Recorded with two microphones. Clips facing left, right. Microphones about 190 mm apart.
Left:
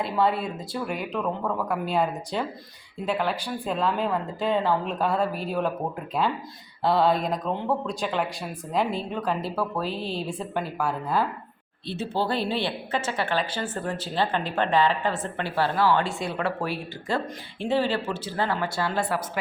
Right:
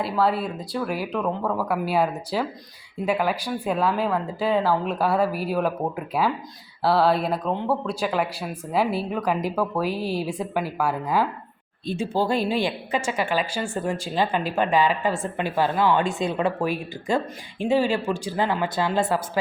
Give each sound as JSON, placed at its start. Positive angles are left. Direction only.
{"t": 0.0, "sound": "a woman's voice", "side_deg": 0}
{"t": 6.8, "sound": "a woman's voice", "side_deg": -5}